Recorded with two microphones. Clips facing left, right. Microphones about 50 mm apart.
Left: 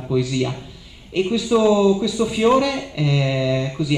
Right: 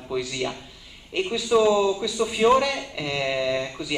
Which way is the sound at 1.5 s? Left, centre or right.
Centre.